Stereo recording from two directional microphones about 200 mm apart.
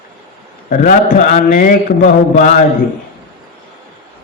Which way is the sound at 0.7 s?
40° left (ahead or behind).